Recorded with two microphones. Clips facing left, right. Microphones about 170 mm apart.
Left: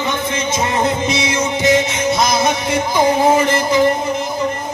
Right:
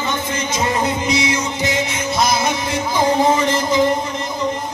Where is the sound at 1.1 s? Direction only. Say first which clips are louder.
Left 1 dB; 20° left (ahead or behind).